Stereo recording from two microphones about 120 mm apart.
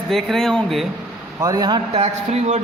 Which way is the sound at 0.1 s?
Centre (ahead or behind).